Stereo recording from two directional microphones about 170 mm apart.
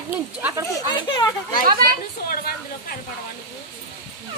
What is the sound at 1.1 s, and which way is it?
Speech, 25° left (ahead or behind).